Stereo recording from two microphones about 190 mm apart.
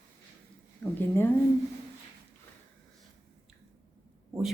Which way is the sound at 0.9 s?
10° left (ahead or behind).